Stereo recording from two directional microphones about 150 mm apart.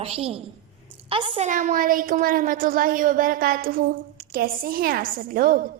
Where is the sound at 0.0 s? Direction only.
40° right (ahead or behind).